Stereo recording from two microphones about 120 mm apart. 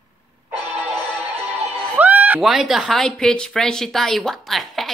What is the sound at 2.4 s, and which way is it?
Speech, centre (ahead or behind).